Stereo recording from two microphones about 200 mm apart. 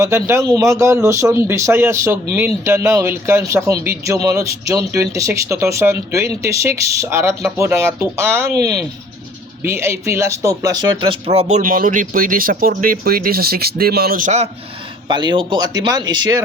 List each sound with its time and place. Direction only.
0.0 s speech: 15° right (ahead or behind); by 14.5 s 35° right (ahead or behind)
15.0 s speech: 20° right (ahead or behind)